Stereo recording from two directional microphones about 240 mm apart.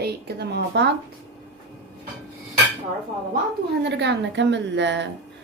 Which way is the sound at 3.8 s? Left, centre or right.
Right.